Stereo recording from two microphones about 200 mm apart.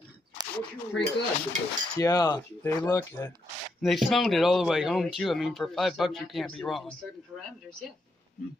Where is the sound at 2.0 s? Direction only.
15° left (ahead or behind).